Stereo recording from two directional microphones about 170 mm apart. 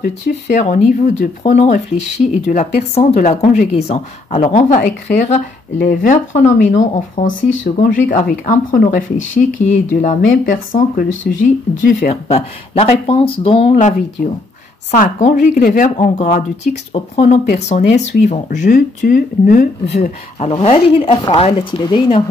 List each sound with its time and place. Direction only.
0.0 s speech: 45° left (ahead or behind)
12.0 s speech: 40° left (ahead or behind)
13.7 s speech: 50° left (ahead or behind)
20.3 s speech: 40° left (ahead or behind)